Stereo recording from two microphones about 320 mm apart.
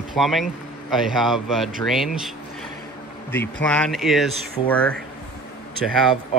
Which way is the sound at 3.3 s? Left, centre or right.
Centre.